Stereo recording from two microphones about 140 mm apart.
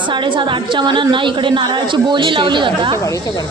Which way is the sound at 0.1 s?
35° right (ahead or behind).